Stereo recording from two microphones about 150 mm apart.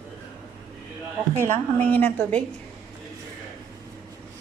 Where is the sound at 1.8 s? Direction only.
10° left (ahead or behind).